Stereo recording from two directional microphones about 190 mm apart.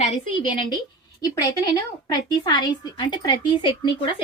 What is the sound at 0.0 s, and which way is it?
A woman's voice, 30° left (ahead or behind).